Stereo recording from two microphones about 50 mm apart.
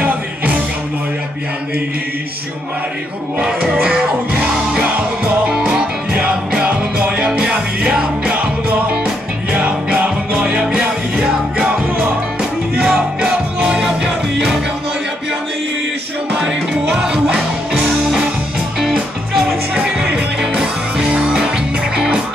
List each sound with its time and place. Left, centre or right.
3.3 s music: centre
5.5 s music: centre
9.5 s music: right
12.8 s music: centre
17.0 s music: centre
20.2 s music: centre